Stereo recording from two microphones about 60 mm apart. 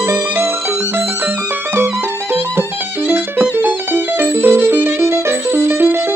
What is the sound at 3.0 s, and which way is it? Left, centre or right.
Music, right.